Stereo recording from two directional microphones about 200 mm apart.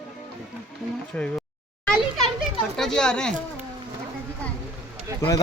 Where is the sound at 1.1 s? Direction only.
5° left (ahead or behind).